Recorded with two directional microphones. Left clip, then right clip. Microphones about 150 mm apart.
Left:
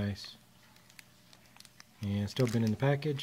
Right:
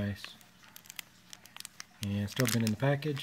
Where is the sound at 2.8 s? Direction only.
15° left (ahead or behind).